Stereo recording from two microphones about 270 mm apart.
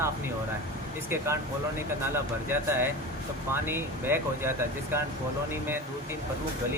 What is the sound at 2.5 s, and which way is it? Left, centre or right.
Speech, centre.